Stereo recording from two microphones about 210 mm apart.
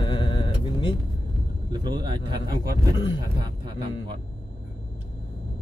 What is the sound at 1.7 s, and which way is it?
Speech, 20° right (ahead or behind).